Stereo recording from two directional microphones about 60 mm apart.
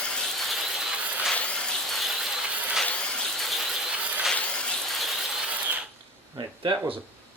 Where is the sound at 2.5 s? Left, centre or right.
Right.